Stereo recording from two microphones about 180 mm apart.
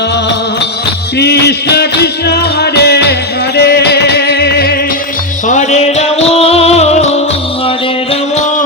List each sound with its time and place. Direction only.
1.2 s music: 65° left (ahead or behind)
5.5 s music: 40° left (ahead or behind)